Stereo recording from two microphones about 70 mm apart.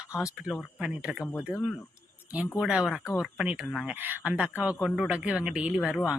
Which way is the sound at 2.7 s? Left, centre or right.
Centre.